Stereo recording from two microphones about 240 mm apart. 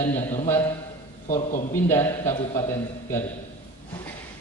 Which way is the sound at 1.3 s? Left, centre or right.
Left.